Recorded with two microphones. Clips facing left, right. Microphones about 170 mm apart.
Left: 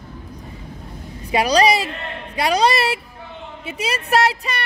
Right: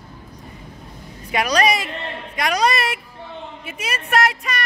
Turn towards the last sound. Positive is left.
turn(degrees=30)  # may be behind; listen again after turning